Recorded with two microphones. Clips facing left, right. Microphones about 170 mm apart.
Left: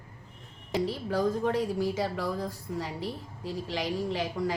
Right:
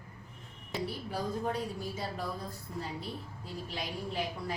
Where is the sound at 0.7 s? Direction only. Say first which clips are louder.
Left 7 dB; 90° left.